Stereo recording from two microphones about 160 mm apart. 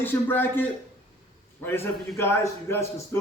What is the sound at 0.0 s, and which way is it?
A man's voice, 15° left (ahead or behind).